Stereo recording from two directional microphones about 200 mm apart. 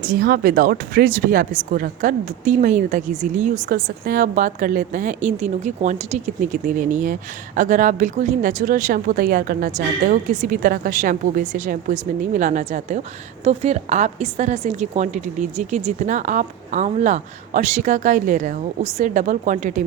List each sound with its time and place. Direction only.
0.0 s speech: 45° right (ahead or behind)